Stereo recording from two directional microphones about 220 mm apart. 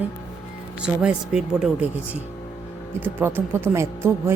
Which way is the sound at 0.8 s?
5° right (ahead or behind).